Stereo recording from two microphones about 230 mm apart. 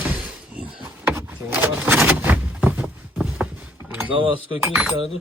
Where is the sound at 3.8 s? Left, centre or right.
Centre.